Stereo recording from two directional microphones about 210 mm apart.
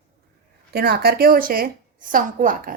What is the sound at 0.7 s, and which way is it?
A woman's voice, 45° right (ahead or behind).